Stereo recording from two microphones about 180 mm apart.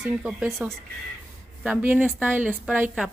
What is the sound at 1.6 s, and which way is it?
A man's voice, 10° right (ahead or behind).